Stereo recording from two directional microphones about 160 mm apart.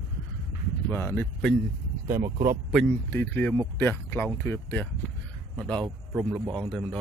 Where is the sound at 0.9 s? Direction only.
15° left (ahead or behind).